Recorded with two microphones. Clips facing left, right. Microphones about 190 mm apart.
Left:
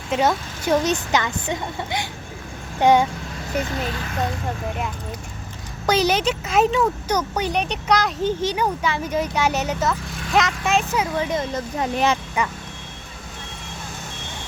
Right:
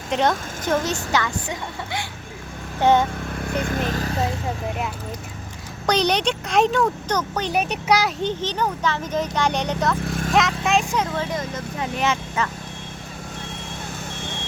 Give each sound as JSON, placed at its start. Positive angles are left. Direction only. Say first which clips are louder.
{"t": 0.1, "sound": "a woman's voice", "louder": "left 1 dB", "side_deg": 5}
{"t": 3.4, "sound": "speech", "louder": "right 1 dB", "side_deg": -55}
{"t": 4.2, "sound": "speech", "louder": "right 1 dB", "side_deg": -5}
{"t": 7.5, "sound": "speech", "louder": "right 2 dB", "side_deg": -5}
{"t": 8.2, "sound": "a woman's voice", "louder": "left 2 dB", "side_deg": 10}
{"t": 10.1, "sound": "vehicle", "louder": "right 7 dB", "side_deg": -45}
{"t": 10.3, "sound": "speech", "louder": "even", "side_deg": 0}
{"t": 11.1, "sound": "speech", "louder": "left 3 dB", "side_deg": 20}
{"t": 11.5, "sound": "speech", "louder": "left 4 dB", "side_deg": 35}
{"t": 12.4, "sound": "a woman's voice", "louder": "left 1 dB", "side_deg": 15}